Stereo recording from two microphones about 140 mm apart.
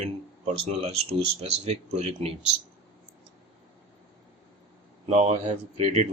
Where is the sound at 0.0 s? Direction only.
50° right (ahead or behind).